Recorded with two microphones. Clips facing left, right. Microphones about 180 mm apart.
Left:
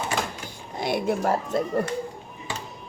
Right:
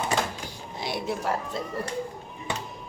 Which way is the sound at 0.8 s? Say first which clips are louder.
Left 6 dB; 55° left (ahead or behind).